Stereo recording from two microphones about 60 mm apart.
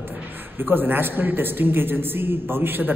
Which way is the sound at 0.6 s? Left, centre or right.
Right.